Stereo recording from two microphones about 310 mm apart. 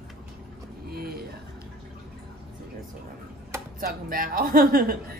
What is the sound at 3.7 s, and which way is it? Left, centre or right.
A woman's voice, right.